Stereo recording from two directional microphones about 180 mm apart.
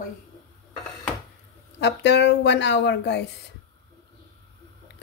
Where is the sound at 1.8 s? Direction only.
70° left (ahead or behind).